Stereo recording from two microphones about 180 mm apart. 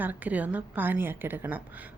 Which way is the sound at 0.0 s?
10° right (ahead or behind).